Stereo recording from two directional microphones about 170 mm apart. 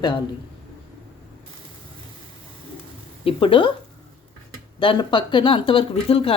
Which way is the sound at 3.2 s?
30° left (ahead or behind).